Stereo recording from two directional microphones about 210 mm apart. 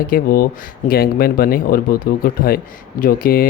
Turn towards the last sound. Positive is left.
turn(degrees=45)  # may be behind; listen again after turning